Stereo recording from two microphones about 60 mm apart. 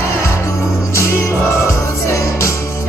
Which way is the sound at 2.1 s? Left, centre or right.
Left.